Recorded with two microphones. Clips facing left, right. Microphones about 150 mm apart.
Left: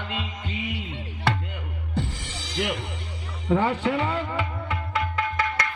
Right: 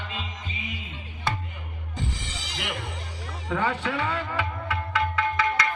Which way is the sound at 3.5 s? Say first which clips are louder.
Left 5 dB; 30° left (ahead or behind).